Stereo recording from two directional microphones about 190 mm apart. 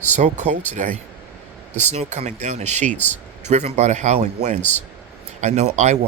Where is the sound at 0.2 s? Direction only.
35° right (ahead or behind).